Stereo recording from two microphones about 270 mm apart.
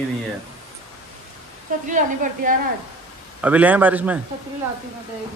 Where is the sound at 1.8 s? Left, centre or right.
Right.